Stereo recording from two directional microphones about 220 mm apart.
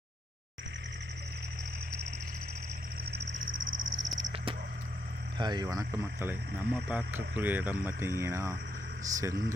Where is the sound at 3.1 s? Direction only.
50° right (ahead or behind).